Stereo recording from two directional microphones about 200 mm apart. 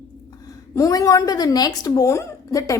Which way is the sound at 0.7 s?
15° left (ahead or behind).